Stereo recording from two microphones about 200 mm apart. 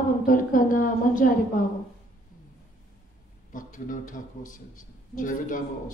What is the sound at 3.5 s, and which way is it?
A man's voice, 40° left (ahead or behind).